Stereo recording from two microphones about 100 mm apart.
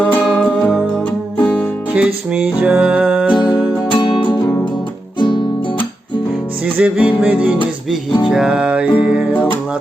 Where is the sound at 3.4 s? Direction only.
50° left (ahead or behind).